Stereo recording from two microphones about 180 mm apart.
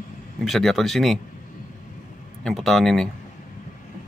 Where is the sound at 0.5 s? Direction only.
Centre (ahead or behind).